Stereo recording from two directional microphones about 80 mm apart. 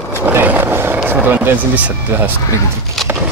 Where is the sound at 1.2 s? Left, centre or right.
Right.